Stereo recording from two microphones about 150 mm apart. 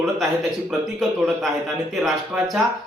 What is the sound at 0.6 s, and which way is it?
Speech, centre (ahead or behind).